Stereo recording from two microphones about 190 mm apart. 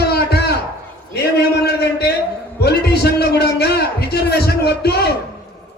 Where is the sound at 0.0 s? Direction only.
60° left (ahead or behind).